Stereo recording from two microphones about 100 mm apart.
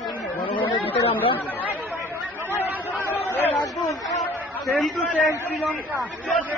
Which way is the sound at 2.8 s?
20° left (ahead or behind).